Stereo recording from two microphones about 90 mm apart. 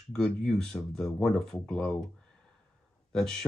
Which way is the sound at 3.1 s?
5° left (ahead or behind).